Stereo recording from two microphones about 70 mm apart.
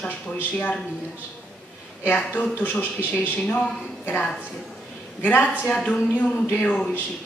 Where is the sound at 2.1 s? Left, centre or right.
Left.